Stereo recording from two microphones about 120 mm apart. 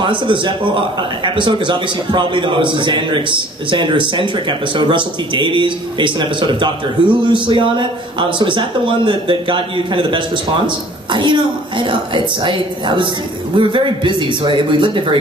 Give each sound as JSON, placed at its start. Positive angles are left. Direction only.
{"t": 0.0, "sound": "a man's voice", "side_deg": -40}